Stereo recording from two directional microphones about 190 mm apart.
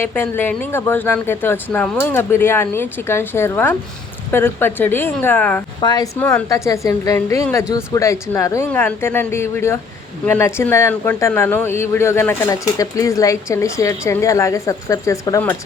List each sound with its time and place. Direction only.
0.0 s speech: 10° left (ahead or behind)
5.8 s speech: 20° left (ahead or behind)
6.1 s speech: 10° left (ahead or behind)